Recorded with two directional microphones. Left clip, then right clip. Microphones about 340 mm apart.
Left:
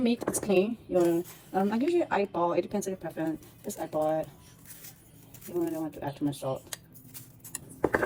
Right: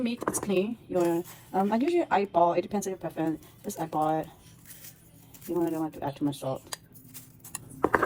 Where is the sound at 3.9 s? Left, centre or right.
Centre.